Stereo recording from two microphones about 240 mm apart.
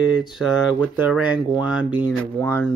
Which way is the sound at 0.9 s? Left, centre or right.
Centre.